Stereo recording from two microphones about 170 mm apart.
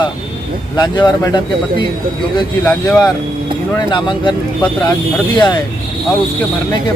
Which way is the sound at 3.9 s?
25° left (ahead or behind).